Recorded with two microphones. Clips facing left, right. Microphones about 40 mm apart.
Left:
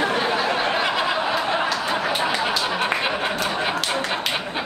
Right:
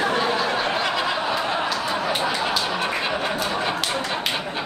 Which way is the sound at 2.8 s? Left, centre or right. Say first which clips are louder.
Left 2 dB; left.